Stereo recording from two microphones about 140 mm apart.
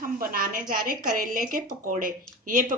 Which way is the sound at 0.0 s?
90° right.